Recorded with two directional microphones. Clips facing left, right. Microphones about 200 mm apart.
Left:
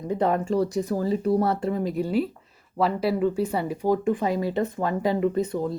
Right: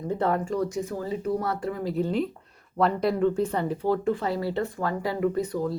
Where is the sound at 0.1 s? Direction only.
15° left (ahead or behind).